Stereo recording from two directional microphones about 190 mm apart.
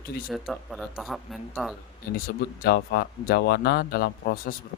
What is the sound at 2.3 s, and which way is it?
A man's voice, 55° left (ahead or behind).